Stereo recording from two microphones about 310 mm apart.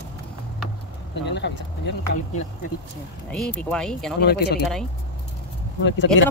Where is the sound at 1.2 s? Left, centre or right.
Left.